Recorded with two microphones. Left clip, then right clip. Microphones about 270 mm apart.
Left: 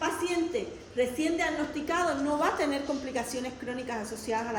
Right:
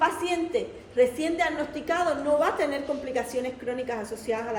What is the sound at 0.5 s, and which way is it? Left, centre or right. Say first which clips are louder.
A woman's voice: right 6 dB; centre.